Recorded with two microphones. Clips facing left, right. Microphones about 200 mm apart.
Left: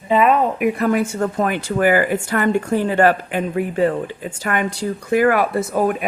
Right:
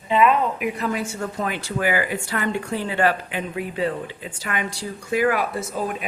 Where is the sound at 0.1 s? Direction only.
45° left (ahead or behind).